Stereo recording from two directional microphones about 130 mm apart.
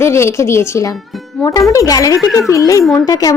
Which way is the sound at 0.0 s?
20° left (ahead or behind).